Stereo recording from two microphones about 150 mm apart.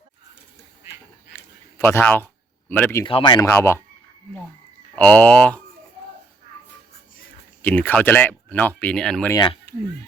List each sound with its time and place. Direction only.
1.3 s a sound: 15° left (ahead or behind)
2.6 s speech: 10° left (ahead or behind)
3.0 s speech: 35° left (ahead or behind)
3.4 s speech: 15° left (ahead or behind)
4.9 s speech: 10° left (ahead or behind)
7.6 s speech: 10° left (ahead or behind)